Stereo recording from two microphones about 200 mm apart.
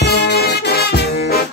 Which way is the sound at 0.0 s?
55° left (ahead or behind).